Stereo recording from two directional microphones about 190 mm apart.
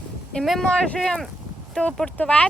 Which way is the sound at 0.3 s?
Centre (ahead or behind).